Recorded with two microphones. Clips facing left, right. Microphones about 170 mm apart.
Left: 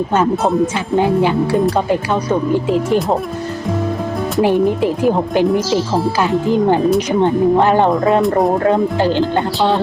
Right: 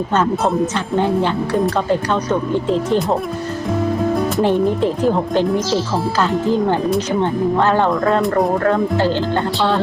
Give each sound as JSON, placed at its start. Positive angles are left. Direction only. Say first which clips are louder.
{"t": 0.1, "sound": "speech", "louder": "left 1 dB", "side_deg": 10}
{"t": 2.5, "sound": "speech", "louder": "left 2 dB", "side_deg": 10}
{"t": 4.4, "sound": "speech", "louder": "left 4 dB", "side_deg": 10}
{"t": 8.2, "sound": "speech", "louder": "left 3 dB", "side_deg": 0}
{"t": 8.6, "sound": "speech", "louder": "left 2 dB", "side_deg": 15}